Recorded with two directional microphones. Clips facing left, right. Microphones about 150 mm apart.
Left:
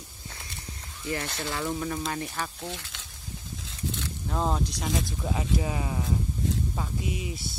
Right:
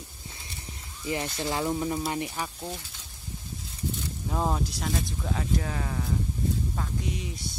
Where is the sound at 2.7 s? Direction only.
85° left.